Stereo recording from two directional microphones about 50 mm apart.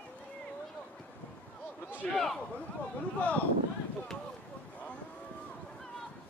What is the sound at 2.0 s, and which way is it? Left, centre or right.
Speech, centre.